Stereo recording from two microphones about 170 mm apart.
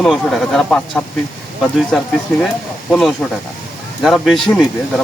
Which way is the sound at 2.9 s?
5° left (ahead or behind).